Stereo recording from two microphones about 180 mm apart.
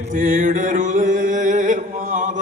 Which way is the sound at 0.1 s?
45° right (ahead or behind).